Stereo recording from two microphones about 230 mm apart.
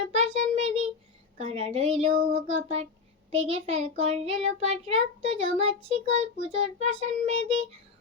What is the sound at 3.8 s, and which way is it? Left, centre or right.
A child's voice, right.